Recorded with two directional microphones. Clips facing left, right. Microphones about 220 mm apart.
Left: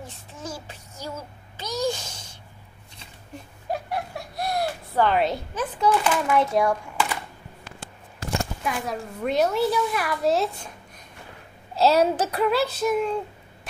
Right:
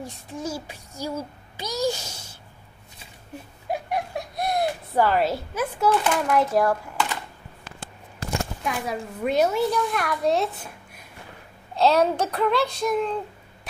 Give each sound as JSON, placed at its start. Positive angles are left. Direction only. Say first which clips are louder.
{"t": 0.0, "sound": "a child's voice", "louder": "right 6 dB", "side_deg": -10}
{"t": 3.7, "sound": "a sound", "louder": "right 2 dB", "side_deg": -15}
{"t": 5.0, "sound": "a woman's voice", "louder": "even", "side_deg": 0}
{"t": 8.6, "sound": "a child's voice", "louder": "even", "side_deg": 0}
{"t": 11.7, "sound": "a child's voice", "louder": "even", "side_deg": 5}